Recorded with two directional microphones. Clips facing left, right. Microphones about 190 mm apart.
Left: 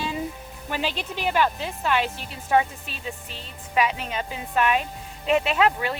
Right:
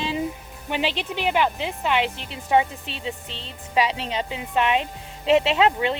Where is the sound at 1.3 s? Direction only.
15° right (ahead or behind).